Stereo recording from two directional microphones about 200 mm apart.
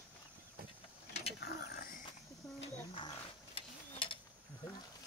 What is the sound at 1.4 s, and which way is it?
Mechanisms, 50° left (ahead or behind).